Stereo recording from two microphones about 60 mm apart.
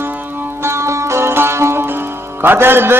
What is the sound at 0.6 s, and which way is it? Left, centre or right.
Sitar, right.